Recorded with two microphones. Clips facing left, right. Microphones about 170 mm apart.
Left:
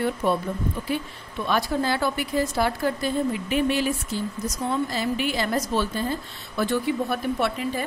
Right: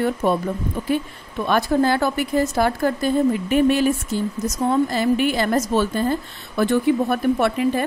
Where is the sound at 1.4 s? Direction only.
50° right (ahead or behind).